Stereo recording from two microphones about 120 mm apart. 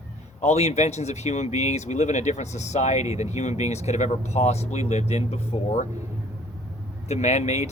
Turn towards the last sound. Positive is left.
turn(degrees=70)  # may be behind; listen again after turning